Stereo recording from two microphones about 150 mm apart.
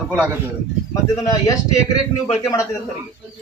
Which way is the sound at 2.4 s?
20° left (ahead or behind).